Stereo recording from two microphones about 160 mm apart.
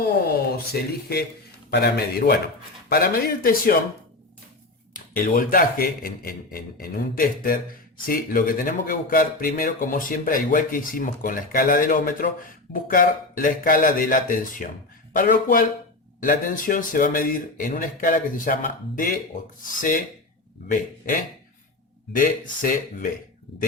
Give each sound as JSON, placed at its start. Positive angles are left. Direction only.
{"t": 0.0, "sound": "a man's voice", "side_deg": 75}
{"t": 4.9, "sound": "a man's voice", "side_deg": 60}
{"t": 20.7, "sound": "a man's voice", "side_deg": 55}